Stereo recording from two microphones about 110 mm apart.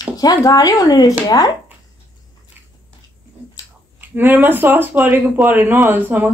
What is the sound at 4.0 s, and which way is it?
Speech, 15° right (ahead or behind).